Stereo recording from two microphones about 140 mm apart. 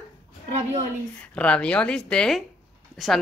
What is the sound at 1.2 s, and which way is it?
A woman's voice, 10° left (ahead or behind).